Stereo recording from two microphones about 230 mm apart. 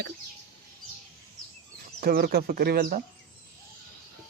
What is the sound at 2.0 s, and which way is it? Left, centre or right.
Speech, right.